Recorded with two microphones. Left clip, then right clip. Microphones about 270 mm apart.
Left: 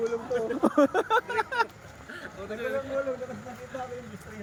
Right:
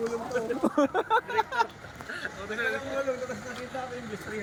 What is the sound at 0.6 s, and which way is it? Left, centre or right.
Speech, centre.